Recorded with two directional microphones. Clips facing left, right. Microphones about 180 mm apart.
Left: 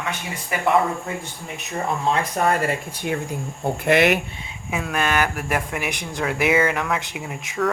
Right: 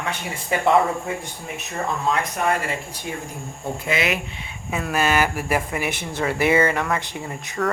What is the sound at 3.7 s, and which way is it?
Speech, 65° left (ahead or behind).